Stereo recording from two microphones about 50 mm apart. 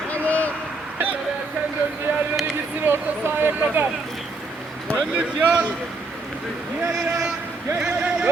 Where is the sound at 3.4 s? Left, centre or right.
Right.